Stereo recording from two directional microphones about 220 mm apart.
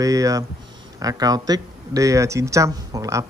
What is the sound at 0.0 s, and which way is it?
Speech, 15° right (ahead or behind).